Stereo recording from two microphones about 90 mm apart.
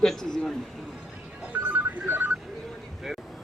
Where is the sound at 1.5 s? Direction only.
15° right (ahead or behind).